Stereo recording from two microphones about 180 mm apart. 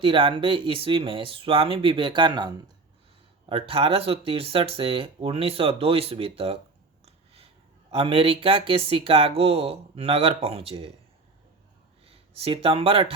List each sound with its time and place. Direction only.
0.0 s speech: 30° right (ahead or behind)
12.0 s speech: 35° right (ahead or behind)